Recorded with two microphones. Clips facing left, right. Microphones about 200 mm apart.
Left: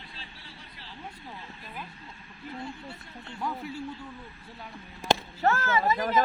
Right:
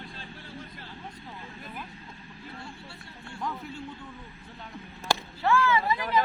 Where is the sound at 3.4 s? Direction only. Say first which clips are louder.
Left 2 dB; 10° left (ahead or behind).